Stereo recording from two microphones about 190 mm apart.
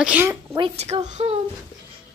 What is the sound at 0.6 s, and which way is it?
Speech, 30° right (ahead or behind).